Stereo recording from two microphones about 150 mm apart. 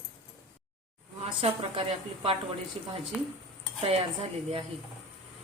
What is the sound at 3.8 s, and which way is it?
Speech, 40° right (ahead or behind).